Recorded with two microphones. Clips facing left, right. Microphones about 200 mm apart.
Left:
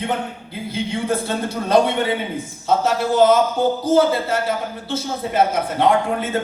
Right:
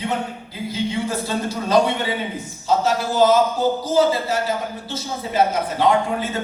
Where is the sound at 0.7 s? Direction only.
55° left (ahead or behind).